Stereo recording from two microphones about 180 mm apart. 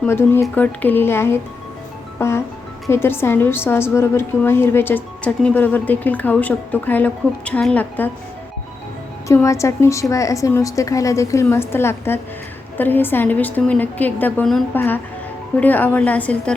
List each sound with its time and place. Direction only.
0.0 s a woman's voice: 15° left (ahead or behind)
9.2 s a woman's voice: 15° left (ahead or behind)